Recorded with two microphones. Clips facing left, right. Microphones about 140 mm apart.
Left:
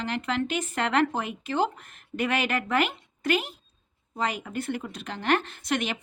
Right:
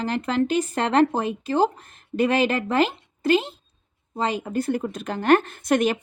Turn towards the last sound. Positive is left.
turn(degrees=-45)  # may be behind; listen again after turning